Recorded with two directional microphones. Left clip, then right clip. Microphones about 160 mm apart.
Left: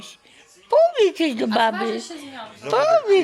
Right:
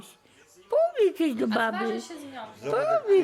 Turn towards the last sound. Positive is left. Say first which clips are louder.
# left 6 dB
turn(degrees=-10)  # may be behind; listen again after turning